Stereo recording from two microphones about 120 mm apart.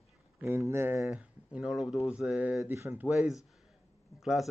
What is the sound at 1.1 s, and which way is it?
Speech, 10° right (ahead or behind).